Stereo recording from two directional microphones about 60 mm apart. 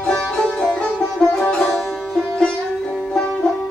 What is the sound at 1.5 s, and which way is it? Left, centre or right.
Sitar, centre.